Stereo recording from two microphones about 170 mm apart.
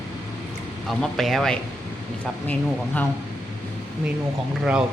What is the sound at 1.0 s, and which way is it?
Speech, centre (ahead or behind).